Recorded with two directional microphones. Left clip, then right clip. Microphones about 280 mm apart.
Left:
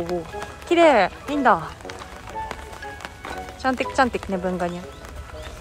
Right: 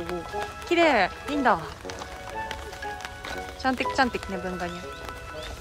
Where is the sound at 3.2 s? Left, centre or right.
Centre.